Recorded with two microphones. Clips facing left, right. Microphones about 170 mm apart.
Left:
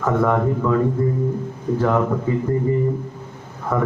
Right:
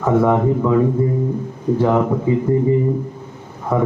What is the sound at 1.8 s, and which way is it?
Speech, 20° right (ahead or behind).